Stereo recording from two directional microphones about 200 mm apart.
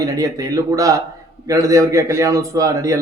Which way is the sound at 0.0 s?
15° right (ahead or behind).